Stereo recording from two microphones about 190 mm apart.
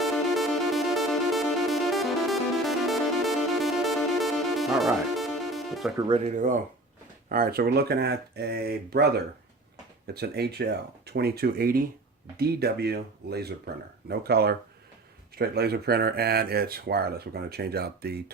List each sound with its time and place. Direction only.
0.0 s music: centre (ahead or behind)
6.0 s speech: 30° right (ahead or behind); by 18.2 s 55° right (ahead or behind)